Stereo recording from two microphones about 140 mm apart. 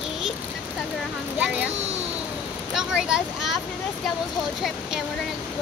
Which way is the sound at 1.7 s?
50° right (ahead or behind).